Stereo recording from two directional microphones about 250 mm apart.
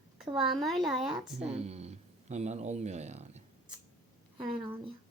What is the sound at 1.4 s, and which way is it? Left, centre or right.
Speech, right.